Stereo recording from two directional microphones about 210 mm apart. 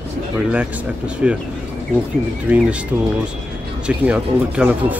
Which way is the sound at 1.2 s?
5° right (ahead or behind).